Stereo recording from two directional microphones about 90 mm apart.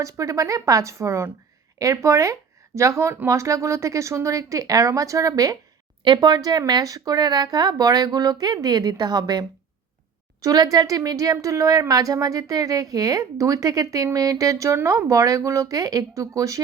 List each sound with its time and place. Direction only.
0.0 s a woman's voice: 35° right (ahead or behind)